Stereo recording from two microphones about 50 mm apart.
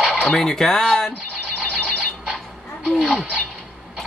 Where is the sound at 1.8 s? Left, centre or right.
Centre.